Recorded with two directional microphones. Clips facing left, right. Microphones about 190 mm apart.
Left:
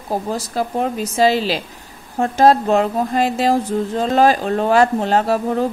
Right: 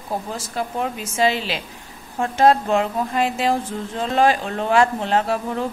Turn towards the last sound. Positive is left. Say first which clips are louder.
# left 4 dB
turn(degrees=40)  # may be behind; listen again after turning